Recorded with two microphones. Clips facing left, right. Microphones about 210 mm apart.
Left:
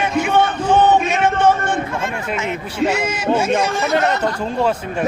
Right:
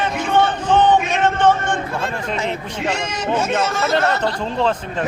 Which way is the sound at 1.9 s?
35° right (ahead or behind).